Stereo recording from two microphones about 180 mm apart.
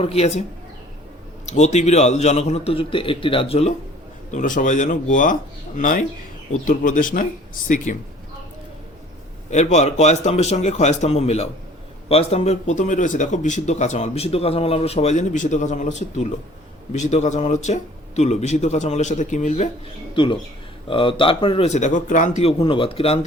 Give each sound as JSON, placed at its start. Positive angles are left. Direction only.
{"t": 0.0, "sound": "speech", "side_deg": 35}
{"t": 1.5, "sound": "speech", "side_deg": 40}
{"t": 4.3, "sound": "speech", "side_deg": 45}
{"t": 9.5, "sound": "speech", "side_deg": 40}
{"t": 20.8, "sound": "speech", "side_deg": 30}